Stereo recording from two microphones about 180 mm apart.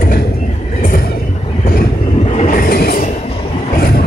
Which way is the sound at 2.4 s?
50° left (ahead or behind).